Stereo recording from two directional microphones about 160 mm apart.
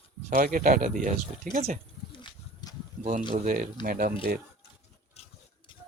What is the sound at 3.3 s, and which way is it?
Speech, 55° right (ahead or behind).